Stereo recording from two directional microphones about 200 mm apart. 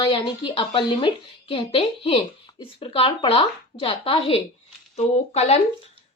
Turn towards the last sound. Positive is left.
turn(degrees=30)  # may be behind; listen again after turning